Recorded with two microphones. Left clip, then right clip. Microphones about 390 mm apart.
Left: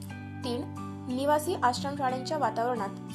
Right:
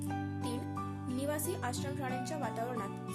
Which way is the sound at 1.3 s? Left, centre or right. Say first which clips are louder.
Left 14 dB; right.